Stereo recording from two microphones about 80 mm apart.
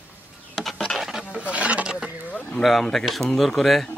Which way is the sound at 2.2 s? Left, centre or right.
Centre.